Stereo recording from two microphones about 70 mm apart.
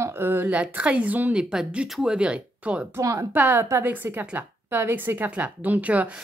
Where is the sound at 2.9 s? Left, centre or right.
Right.